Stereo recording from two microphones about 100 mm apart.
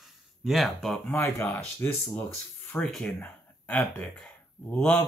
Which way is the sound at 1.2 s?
25° left (ahead or behind).